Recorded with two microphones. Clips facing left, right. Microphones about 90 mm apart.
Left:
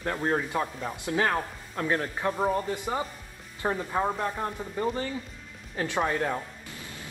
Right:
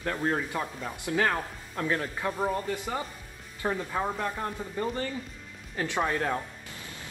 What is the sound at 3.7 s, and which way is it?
Speech, 10° left (ahead or behind).